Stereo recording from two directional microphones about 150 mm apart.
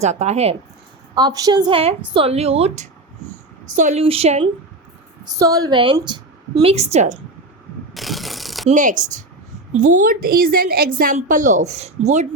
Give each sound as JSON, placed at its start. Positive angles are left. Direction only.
{"t": 0.0, "sound": "speech", "side_deg": -50}
{"t": 1.1, "sound": "a woman's voice", "side_deg": -25}
{"t": 2.1, "sound": "a woman's voice", "side_deg": -40}
{"t": 4.0, "sound": "speech", "side_deg": -40}
{"t": 5.3, "sound": "a woman's voice", "side_deg": -25}
{"t": 6.6, "sound": "speech", "side_deg": -45}
{"t": 7.9, "sound": "pulleys", "side_deg": 0}
{"t": 8.7, "sound": "a woman's voice", "side_deg": -60}